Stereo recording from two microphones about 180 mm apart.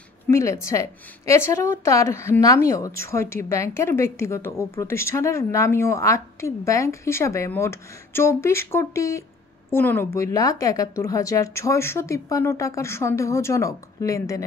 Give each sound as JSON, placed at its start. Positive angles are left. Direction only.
{"t": 0.3, "sound": "speech", "side_deg": 15}